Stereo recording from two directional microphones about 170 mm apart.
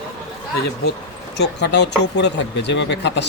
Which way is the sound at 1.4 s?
85° left.